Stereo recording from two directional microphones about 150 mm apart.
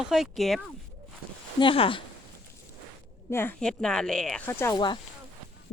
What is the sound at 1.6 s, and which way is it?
Speech, 35° left (ahead or behind).